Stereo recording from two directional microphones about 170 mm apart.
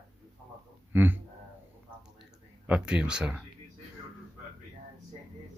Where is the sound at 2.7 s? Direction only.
5° right (ahead or behind).